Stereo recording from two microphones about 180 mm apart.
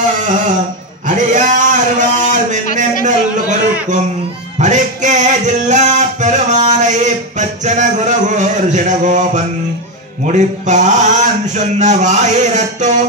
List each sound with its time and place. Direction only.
1.0 s a sound: 45° right (ahead or behind)
4.6 s music: 45° right (ahead or behind)
10.2 s a man's voice: 40° right (ahead or behind)